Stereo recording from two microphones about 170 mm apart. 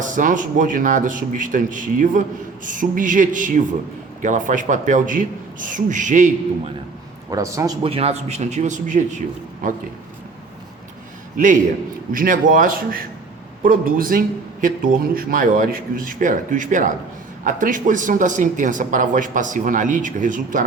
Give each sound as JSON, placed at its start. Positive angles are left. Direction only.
{"t": 0.0, "sound": "a man's voice", "side_deg": -50}
{"t": 7.3, "sound": "a man's voice", "side_deg": -20}
{"t": 7.9, "sound": "a man's voice", "side_deg": -35}
{"t": 12.1, "sound": "a man's voice", "side_deg": -55}